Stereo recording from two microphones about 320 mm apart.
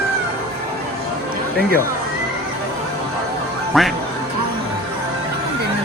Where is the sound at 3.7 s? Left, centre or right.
Centre.